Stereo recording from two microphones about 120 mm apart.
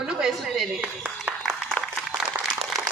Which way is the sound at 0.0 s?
5° right (ahead or behind).